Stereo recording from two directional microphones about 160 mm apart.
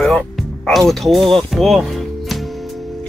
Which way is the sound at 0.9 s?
Centre (ahead or behind).